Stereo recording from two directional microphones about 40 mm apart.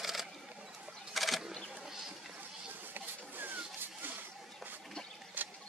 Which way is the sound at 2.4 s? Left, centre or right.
Right.